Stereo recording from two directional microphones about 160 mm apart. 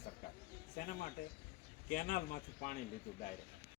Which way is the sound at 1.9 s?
65° left (ahead or behind).